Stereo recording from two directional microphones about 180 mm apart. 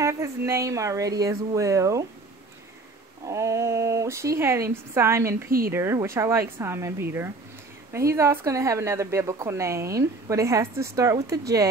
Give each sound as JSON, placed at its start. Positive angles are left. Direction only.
{"t": 0.0, "sound": "speech", "side_deg": -15}
{"t": 3.3, "sound": "speech", "side_deg": -15}